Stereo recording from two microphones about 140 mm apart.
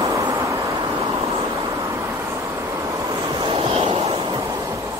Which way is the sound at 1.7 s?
25° right (ahead or behind).